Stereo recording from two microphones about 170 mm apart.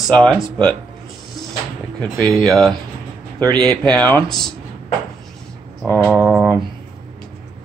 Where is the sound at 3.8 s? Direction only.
10° left (ahead or behind).